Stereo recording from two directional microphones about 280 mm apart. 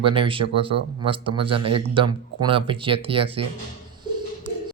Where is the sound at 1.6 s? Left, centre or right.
Right.